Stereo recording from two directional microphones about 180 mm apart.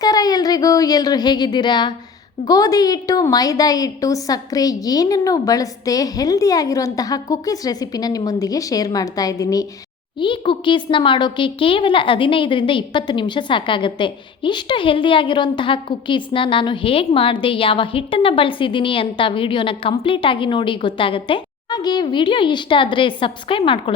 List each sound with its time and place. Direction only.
0.0 s a woman's voice: 20° left (ahead or behind)